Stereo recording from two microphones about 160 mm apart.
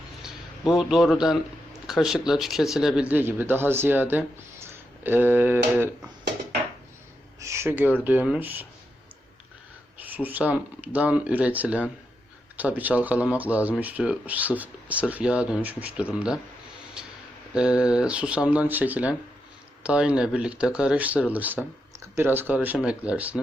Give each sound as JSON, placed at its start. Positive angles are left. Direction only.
{"t": 0.2, "sound": "a man's voice", "side_deg": 0}
{"t": 7.3, "sound": "a sound", "side_deg": -20}
{"t": 8.0, "sound": "speech", "side_deg": -10}
{"t": 10.1, "sound": "speech", "side_deg": -10}
{"t": 17.5, "sound": "speech", "side_deg": -5}